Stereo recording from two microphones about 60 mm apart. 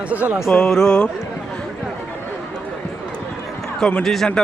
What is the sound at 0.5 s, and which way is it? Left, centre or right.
Speech, centre.